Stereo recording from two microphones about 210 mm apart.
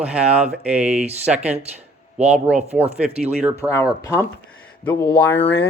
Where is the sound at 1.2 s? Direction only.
5° right (ahead or behind).